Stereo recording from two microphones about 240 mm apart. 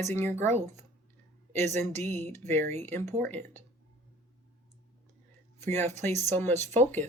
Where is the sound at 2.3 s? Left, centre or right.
Centre.